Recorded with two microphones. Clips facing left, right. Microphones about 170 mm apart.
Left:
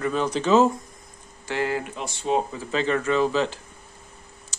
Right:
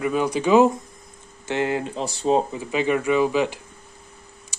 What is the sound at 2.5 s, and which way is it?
Speech, 15° right (ahead or behind).